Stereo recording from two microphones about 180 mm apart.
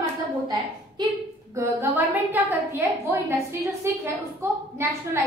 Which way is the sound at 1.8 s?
10° right (ahead or behind).